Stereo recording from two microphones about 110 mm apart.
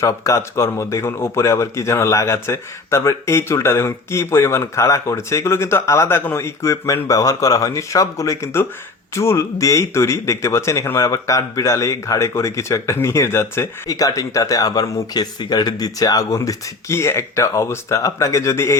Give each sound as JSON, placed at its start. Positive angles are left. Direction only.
{"t": 0.0, "sound": "speech", "side_deg": 30}